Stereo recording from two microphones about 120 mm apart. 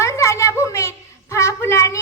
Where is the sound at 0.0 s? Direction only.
25° left (ahead or behind).